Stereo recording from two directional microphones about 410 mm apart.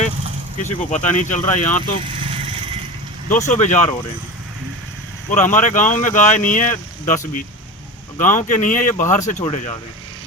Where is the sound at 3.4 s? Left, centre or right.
Centre.